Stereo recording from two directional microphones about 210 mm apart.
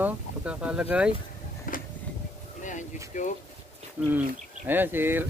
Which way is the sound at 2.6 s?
35° left (ahead or behind).